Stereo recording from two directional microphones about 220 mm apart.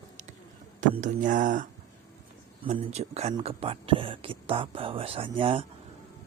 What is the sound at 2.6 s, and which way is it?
Speech, 30° right (ahead or behind).